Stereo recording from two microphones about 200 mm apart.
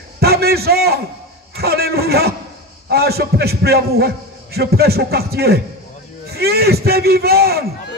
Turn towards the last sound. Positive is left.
turn(degrees=-50)  # may be behind; listen again after turning